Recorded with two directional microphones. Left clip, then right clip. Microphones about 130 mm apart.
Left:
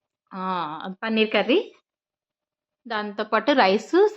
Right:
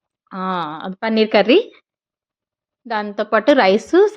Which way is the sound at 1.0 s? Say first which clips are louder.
Right 7 dB; 55° right (ahead or behind).